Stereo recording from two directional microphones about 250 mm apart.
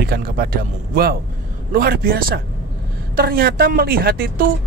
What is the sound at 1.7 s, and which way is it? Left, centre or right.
Speech, right.